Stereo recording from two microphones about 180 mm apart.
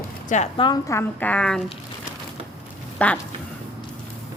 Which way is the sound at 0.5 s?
25° left (ahead or behind).